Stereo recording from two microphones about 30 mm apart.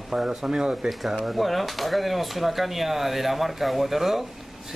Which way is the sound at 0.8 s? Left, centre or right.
Centre.